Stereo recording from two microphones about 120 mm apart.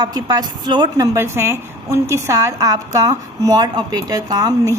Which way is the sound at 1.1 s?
20° right (ahead or behind).